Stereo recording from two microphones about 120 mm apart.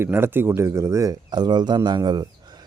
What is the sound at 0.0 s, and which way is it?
Speech, 20° right (ahead or behind).